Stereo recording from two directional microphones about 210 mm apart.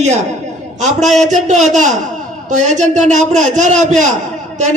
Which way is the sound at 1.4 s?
35° right (ahead or behind).